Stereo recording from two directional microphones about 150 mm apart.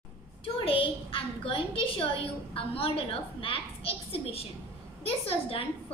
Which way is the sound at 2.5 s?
40° left (ahead or behind).